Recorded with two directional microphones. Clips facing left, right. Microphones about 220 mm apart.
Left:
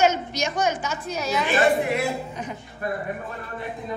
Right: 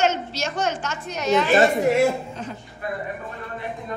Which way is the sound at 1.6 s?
45° right (ahead or behind).